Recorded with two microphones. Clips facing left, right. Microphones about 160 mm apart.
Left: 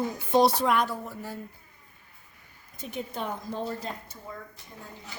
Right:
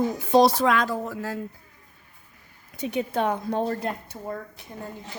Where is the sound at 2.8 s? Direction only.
70° right (ahead or behind).